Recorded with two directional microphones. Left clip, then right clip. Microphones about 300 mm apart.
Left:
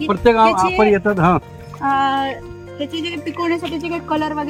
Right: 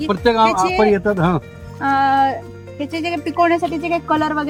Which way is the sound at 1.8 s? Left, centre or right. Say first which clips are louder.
Right 2 dB; centre.